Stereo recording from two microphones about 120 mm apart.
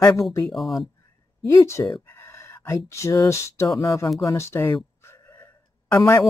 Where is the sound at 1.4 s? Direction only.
25° left (ahead or behind).